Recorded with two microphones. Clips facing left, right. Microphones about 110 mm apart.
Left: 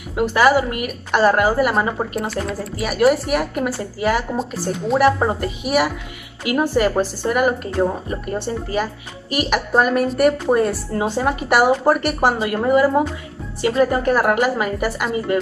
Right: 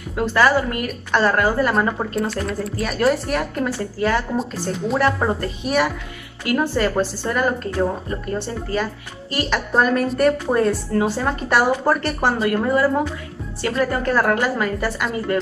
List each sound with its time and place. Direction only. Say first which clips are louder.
0.1 s a woman's voice: left 2 dB; 15° left (ahead or behind)